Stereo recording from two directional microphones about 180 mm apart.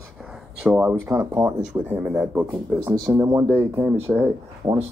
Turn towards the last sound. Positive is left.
turn(degrees=-10)  # may be behind; listen again after turning